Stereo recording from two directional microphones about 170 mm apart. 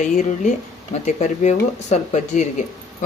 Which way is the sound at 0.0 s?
45° left (ahead or behind).